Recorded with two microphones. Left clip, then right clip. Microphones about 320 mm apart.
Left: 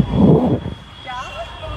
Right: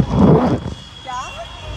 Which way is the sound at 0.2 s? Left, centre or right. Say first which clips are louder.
Right 1 dB; centre.